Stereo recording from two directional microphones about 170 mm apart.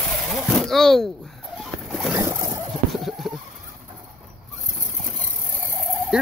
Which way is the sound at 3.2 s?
Centre (ahead or behind).